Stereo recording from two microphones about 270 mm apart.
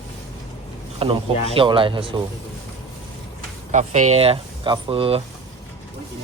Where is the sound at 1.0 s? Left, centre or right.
Right.